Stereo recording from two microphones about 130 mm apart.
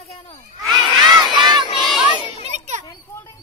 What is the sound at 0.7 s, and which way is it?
Crowd, 35° right (ahead or behind).